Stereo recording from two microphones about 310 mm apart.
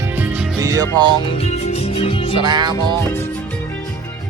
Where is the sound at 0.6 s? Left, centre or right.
Centre.